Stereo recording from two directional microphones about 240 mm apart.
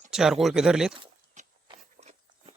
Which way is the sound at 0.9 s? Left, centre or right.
Right.